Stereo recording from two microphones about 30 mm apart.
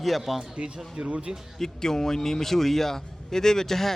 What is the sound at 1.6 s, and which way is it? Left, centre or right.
Speech, centre.